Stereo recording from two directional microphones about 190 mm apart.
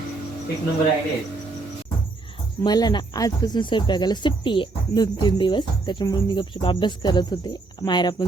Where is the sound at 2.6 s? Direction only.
20° left (ahead or behind).